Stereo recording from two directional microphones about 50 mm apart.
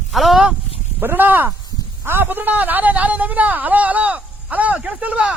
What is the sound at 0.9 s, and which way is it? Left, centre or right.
Speech, right.